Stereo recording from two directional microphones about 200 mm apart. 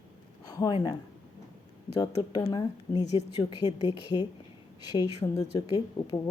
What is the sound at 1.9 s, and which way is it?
Speech, 20° left (ahead or behind).